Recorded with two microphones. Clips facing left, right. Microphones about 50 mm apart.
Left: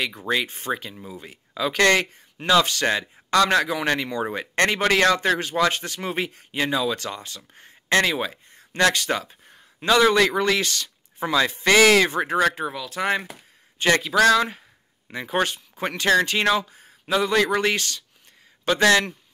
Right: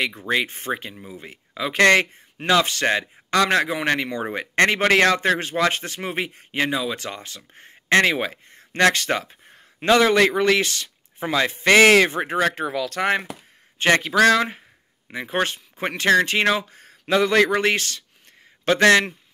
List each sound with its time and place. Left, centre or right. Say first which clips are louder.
0.3 s speech: even; right
6.5 s speech: right 1 dB; right
6.8 s speech: left 2 dB; right
7.1 s speech: even; right
12.7 s speech: right 6 dB; right
13.7 s a man's voice: right 2 dB; right
15.1 s speech: even; right
16.6 s speech: right 4 dB; right
17.5 s speech: right 2 dB; right